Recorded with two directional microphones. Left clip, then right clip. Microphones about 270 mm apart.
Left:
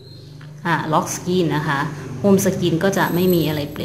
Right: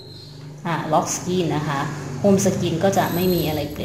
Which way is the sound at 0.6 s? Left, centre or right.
Left.